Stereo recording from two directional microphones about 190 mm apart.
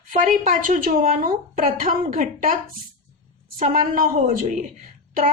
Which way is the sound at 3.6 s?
45° right (ahead or behind).